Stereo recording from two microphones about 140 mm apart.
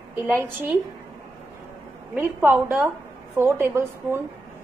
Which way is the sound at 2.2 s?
15° right (ahead or behind).